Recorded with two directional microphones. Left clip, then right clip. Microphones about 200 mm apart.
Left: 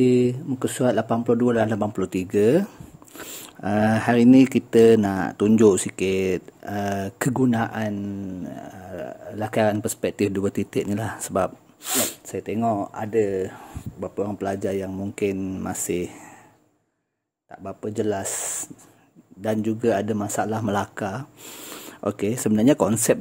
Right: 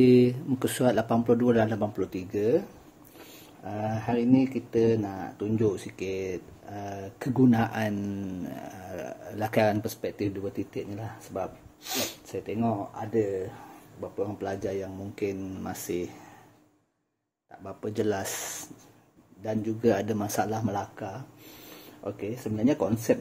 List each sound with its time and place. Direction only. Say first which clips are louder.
0.0 s speech: left 1 dB; 20° left (ahead or behind); by 2.6 s 45° left (ahead or behind)
3.6 s speech: left 11 dB; 55° left (ahead or behind)
7.3 s speech: even; 25° left (ahead or behind)
10.0 s speech: left 11 dB; 45° left (ahead or behind)
17.8 s speech: left 3 dB; 20° left (ahead or behind)
19.4 s speech: left 4 dB; 45° left (ahead or behind)
20.7 s speech: left 8 dB; 50° left (ahead or behind)